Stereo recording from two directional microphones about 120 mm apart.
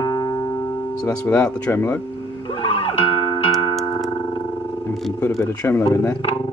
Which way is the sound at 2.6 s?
50° left (ahead or behind).